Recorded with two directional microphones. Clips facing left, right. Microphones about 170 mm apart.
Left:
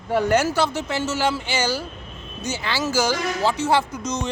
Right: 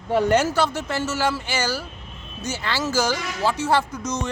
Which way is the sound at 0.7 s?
10° left (ahead or behind).